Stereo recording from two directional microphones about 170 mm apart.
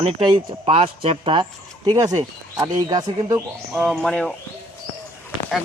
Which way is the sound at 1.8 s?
20° right (ahead or behind).